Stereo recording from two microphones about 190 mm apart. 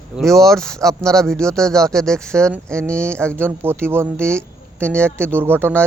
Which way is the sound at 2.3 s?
15° right (ahead or behind).